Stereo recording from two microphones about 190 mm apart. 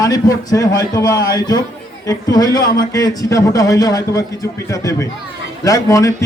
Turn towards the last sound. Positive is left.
turn(degrees=15)  # may be behind; listen again after turning